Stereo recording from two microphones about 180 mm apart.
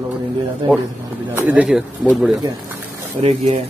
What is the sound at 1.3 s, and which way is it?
A man's voice, 10° right (ahead or behind).